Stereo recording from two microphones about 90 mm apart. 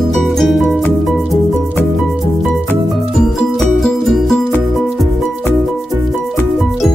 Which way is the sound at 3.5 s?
5° left (ahead or behind).